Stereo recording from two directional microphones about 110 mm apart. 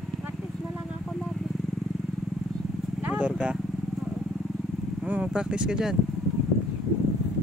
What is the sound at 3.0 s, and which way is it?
Vehicle, 15° right (ahead or behind).